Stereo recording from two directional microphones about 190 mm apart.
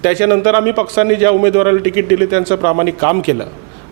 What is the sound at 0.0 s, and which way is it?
A man's voice, 10° right (ahead or behind).